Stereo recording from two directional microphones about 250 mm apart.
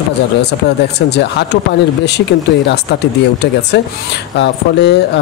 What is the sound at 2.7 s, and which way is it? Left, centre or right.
Speech, left.